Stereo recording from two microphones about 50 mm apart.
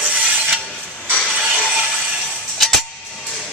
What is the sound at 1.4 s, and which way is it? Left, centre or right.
Music, centre.